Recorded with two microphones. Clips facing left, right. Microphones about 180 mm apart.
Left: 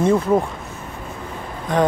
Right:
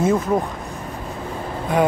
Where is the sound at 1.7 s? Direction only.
10° right (ahead or behind).